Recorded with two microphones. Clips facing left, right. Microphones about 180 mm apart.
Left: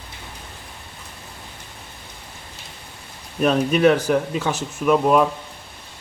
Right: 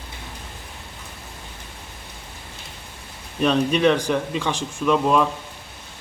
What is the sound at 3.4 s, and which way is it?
Speech, 10° left (ahead or behind).